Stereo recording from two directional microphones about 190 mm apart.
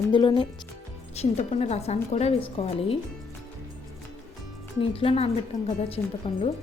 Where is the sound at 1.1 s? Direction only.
35° left (ahead or behind).